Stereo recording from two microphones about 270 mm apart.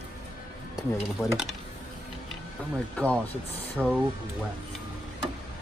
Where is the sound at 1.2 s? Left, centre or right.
Centre.